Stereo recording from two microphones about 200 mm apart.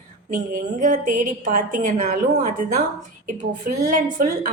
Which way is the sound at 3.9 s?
45° right (ahead or behind).